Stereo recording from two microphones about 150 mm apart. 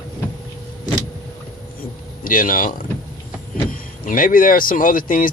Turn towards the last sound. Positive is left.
turn(degrees=65)  # may be behind; listen again after turning